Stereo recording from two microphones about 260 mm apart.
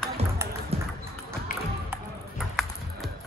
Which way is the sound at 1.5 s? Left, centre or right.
Left.